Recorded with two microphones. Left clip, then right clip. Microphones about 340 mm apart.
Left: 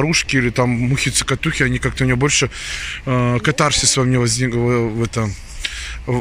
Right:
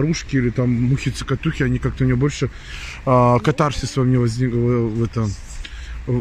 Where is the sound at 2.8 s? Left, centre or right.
Centre.